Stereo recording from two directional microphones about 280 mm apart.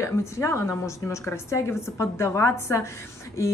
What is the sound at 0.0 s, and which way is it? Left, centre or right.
Speech, centre.